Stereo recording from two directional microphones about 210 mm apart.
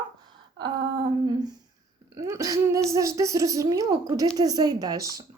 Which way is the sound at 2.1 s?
15° right (ahead or behind).